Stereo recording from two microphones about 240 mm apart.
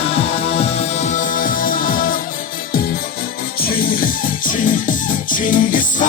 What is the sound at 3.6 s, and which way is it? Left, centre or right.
Music, left.